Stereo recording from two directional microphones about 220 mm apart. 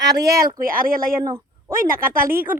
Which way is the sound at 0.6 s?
40° right (ahead or behind).